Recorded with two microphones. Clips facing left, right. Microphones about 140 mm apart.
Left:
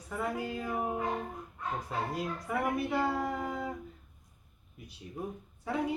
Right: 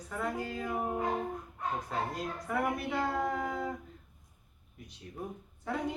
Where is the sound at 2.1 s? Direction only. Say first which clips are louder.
Left 1 dB; 10° left (ahead or behind).